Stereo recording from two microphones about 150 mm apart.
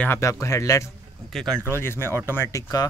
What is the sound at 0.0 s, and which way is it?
Speech, 15° left (ahead or behind).